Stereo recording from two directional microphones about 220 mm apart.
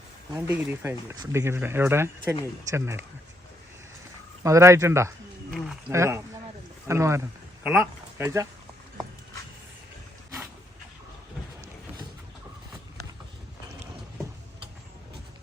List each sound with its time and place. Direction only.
0.3 s speech: 10° right (ahead or behind)
4.4 s speech: 15° right (ahead or behind)